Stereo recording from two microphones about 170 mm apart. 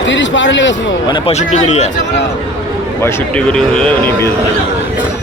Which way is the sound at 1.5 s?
40° left (ahead or behind).